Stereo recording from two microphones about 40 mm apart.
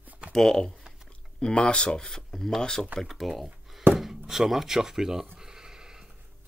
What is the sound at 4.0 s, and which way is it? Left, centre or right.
Speech, centre.